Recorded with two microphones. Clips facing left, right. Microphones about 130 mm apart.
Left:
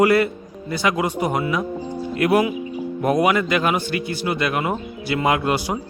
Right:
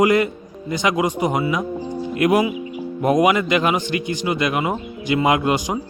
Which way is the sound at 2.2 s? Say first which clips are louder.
Right 1 dB; 10° right (ahead or behind).